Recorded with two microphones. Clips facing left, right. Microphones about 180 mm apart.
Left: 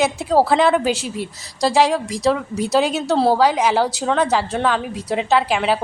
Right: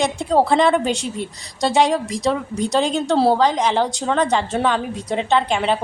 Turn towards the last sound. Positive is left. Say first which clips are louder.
# left 1 dB
turn(degrees=5)  # may be behind; listen again after turning